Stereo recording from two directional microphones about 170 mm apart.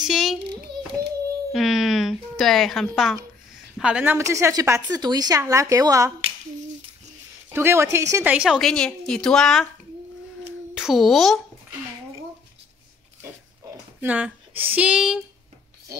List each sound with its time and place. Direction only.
0.0 s a woman's voice: centre (ahead or behind)
1.5 s a woman's voice: centre (ahead or behind); by 6.1 s 20° right (ahead or behind)
7.5 s a woman's voice: 15° right (ahead or behind)
8.3 s a woman's voice: 5° right (ahead or behind)
10.7 s speech: 5° right (ahead or behind)
13.2 s a sound: 10° right (ahead or behind)